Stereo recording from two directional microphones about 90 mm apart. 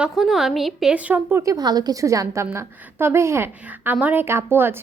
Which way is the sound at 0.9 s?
20° right (ahead or behind).